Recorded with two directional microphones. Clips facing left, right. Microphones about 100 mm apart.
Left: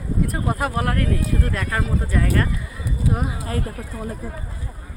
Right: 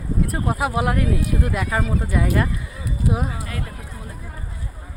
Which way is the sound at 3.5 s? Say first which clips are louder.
Left 5 dB; 40° left (ahead or behind).